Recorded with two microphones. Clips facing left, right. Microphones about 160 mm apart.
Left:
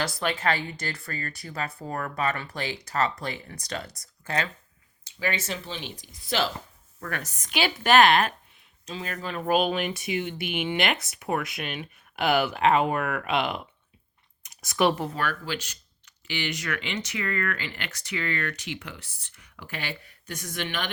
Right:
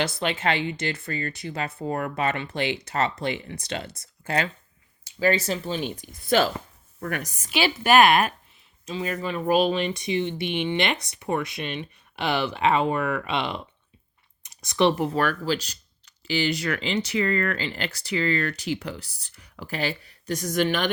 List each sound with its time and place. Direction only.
0.3 s speech: 25° right (ahead or behind); by 6.5 s 50° right (ahead or behind)
7.1 s a woman's voice: 15° right (ahead or behind); by 13.6 s centre (ahead or behind)
14.4 s a sound: centre (ahead or behind)
15.1 s speech: 40° right (ahead or behind)